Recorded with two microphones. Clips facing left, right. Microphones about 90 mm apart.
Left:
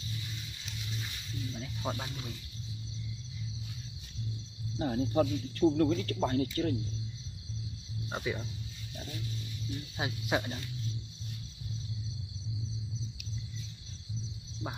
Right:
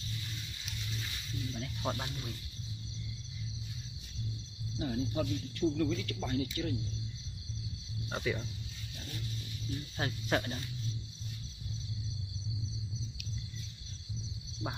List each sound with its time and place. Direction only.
1.5 s snake: 5° left (ahead or behind)
4.7 s speech: 40° left (ahead or behind)
8.1 s speech: 15° left (ahead or behind)
9.9 s speech: 10° left (ahead or behind)